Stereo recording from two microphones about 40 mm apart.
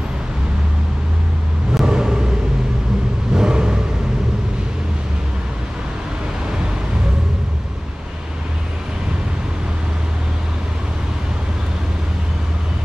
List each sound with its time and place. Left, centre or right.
1.7 s vehicle: centre
3.3 s vehicle: centre